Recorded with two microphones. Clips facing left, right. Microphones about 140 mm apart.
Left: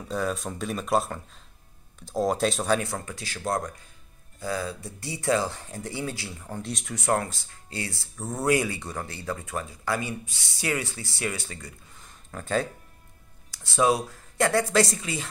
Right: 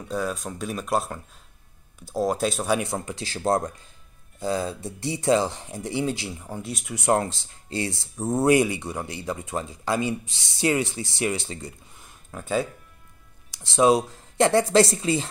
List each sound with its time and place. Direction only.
0.0 s speech: centre (ahead or behind)
2.8 s speech: 20° right (ahead or behind)
6.5 s speech: 5° right (ahead or behind)
7.0 s speech: 25° right (ahead or behind)
12.0 s a sound: 5° right (ahead or behind)
13.5 s speech: 20° right (ahead or behind)